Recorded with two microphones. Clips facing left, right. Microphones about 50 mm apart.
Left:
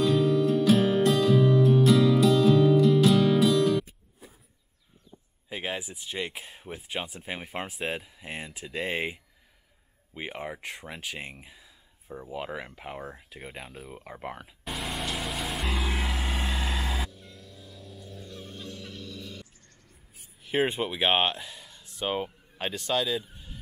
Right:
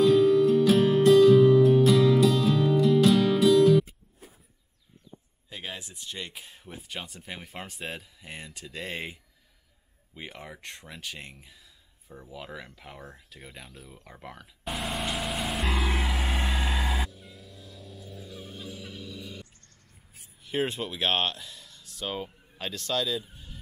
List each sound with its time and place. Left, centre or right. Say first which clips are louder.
0.0 s music: right 4 dB; centre
5.5 s speech: left 6 dB; centre
10.6 s speech: left 3 dB; centre
14.6 s vehicle: right 2 dB; centre
16.1 s vehicle: right 1 dB; centre
17.1 s fowl: even; centre
20.4 s speech: left 3 dB; centre
23.2 s a sound: left 1 dB; centre